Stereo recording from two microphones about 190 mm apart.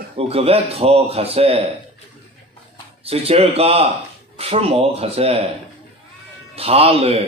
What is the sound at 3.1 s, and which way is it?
Speech, 30° right (ahead or behind).